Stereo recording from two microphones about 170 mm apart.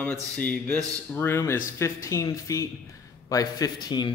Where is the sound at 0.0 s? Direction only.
10° left (ahead or behind).